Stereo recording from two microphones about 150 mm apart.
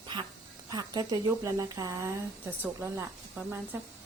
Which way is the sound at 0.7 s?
25° right (ahead or behind).